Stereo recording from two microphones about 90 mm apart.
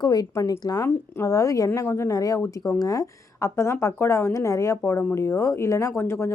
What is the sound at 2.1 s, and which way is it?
A woman's voice, 40° left (ahead or behind).